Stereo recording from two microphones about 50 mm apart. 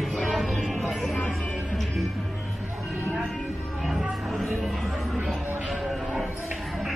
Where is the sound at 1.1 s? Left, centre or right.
Left.